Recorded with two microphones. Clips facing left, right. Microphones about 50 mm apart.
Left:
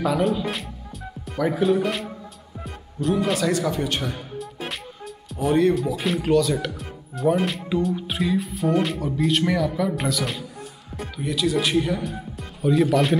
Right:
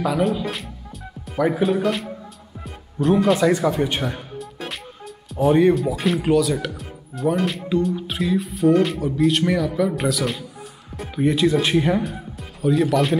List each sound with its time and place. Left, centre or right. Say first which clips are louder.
0.0 s music: right 1 dB; centre
1.4 s speech: right 1 dB; centre
3.0 s speech: right 5 dB; right
3.3 s a man's voice: right 4 dB; centre
5.5 s a man's voice: right 3 dB; centre
5.9 s speech: right 2 dB; centre
11.1 s speech: right 6 dB; right
12.0 s speech: right 2 dB; centre